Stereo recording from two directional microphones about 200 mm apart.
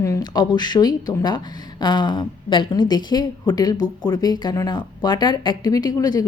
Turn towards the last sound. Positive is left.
turn(degrees=20)  # may be behind; listen again after turning